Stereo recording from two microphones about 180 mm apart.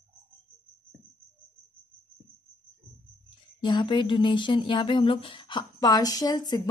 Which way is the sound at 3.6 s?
25° left (ahead or behind).